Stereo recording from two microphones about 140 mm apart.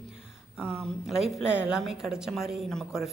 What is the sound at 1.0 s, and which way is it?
Speech, 5° right (ahead or behind).